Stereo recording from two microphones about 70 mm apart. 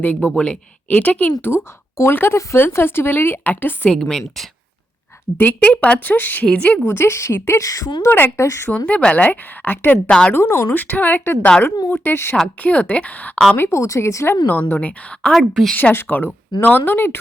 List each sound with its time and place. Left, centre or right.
0.0 s a woman's voice: left
1.4 s speech: left
3.8 s a woman's voice: centre
5.4 s a woman's voice: left
6.8 s a woman's voice: left
8.4 s speech: left
8.9 s a woman's voice: centre
10.1 s a woman's voice: centre
10.3 s a woman's voice: left
12.6 s a woman's voice: left
13.6 s speech: left
14.4 s a woman's voice: left
15.3 s a woman's voice: centre
15.7 s a woman's voice: left